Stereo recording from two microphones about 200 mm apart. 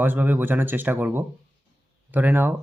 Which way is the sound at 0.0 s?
10° right (ahead or behind).